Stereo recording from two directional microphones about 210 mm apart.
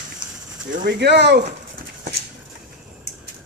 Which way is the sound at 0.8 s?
55° right (ahead or behind).